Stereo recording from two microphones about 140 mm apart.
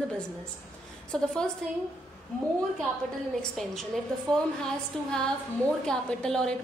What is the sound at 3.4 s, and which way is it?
Speech, centre (ahead or behind).